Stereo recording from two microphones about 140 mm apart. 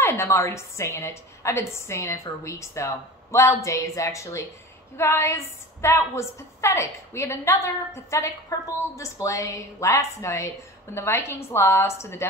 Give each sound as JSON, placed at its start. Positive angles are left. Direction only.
{"t": 0.0, "sound": "a woman's voice", "side_deg": 20}